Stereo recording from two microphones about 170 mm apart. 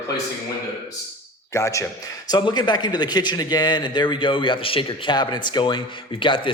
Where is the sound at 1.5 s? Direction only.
15° left (ahead or behind).